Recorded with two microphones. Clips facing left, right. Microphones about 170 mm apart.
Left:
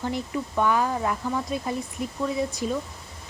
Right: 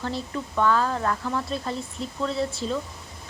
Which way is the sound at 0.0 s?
15° left (ahead or behind).